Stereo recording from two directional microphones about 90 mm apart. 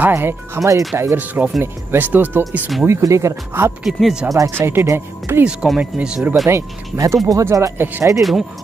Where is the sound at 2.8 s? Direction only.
35° right (ahead or behind).